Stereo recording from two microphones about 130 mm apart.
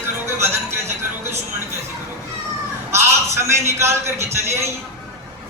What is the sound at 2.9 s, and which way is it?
A man's voice, 20° right (ahead or behind).